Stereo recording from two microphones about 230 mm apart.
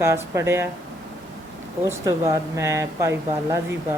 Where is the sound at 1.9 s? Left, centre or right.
Centre.